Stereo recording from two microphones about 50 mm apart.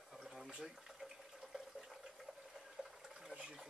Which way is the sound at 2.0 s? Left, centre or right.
Centre.